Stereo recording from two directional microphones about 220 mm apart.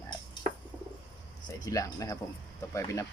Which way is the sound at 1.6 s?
15° left (ahead or behind).